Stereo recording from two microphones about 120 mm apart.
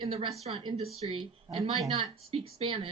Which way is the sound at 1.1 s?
45° right (ahead or behind).